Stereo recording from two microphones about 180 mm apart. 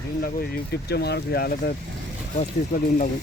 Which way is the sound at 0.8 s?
65° left (ahead or behind).